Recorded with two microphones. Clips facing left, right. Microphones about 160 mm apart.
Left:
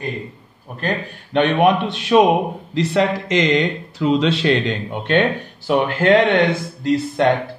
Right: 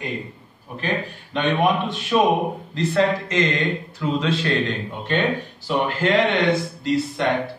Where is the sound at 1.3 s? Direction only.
65° left (ahead or behind).